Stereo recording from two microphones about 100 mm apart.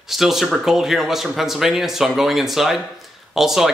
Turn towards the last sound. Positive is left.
turn(degrees=-5)  # may be behind; listen again after turning